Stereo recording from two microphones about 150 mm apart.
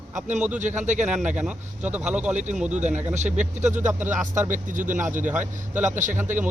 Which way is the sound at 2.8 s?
50° right (ahead or behind).